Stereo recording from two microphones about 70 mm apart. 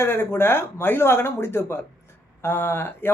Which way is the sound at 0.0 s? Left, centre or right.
Left.